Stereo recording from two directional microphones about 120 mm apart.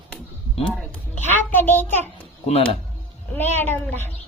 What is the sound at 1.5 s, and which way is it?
Speech, 15° left (ahead or behind).